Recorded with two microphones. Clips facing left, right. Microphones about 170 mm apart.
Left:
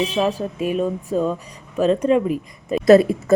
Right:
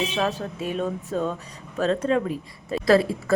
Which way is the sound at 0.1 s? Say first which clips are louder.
Left 5 dB; 10° left (ahead or behind).